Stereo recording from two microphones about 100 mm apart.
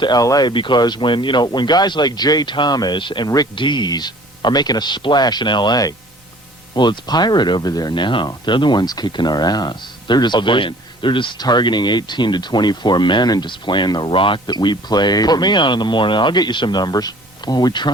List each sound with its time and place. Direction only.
0.0 s speech: 40° left (ahead or behind)
3.5 s speech: 50° left (ahead or behind)